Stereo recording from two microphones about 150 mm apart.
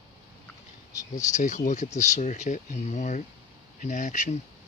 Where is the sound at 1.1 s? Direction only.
55° left (ahead or behind).